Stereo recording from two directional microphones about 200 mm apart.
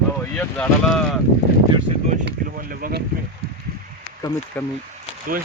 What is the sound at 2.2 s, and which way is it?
Speech, 45° right (ahead or behind).